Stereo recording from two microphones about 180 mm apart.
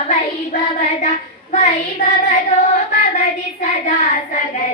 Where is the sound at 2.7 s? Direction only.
40° left (ahead or behind).